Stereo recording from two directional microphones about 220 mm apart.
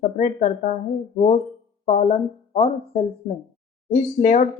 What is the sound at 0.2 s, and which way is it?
Speech, 30° left (ahead or behind).